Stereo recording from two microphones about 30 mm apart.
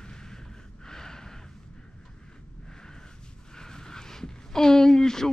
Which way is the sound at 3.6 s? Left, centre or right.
Left.